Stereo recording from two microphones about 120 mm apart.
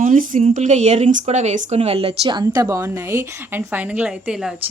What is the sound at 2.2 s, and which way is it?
A woman's voice, 35° right (ahead or behind).